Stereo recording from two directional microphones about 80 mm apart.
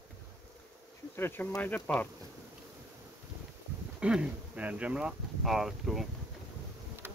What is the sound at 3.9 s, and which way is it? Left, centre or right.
Speech, centre.